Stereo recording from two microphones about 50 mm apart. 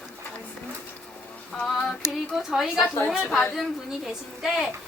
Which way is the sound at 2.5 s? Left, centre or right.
Centre.